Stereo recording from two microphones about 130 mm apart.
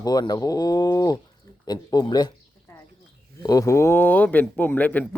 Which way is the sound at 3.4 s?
25° left (ahead or behind).